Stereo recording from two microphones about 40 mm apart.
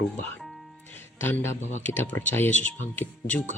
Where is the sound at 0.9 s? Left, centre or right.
Left.